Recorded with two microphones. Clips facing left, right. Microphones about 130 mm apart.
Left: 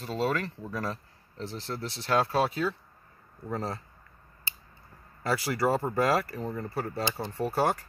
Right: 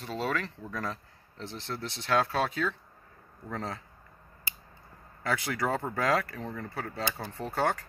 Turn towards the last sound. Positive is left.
turn(degrees=10)  # may be behind; listen again after turning